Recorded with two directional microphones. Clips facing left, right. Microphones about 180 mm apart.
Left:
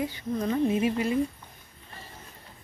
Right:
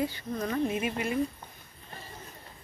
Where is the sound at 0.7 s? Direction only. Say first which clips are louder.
Left 5 dB; 30° left (ahead or behind).